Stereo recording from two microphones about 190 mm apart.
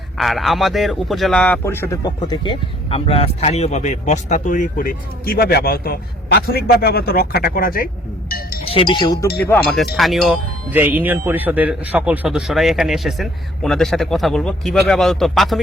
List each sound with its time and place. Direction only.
0.2 s speech: centre (ahead or behind); by 7.9 s 50° left (ahead or behind)
8.6 s chink: 30° left (ahead or behind)
9.2 s speech: 55° left (ahead or behind)
9.5 s speech: 5° left (ahead or behind)